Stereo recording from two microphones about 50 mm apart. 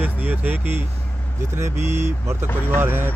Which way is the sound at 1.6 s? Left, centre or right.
Right.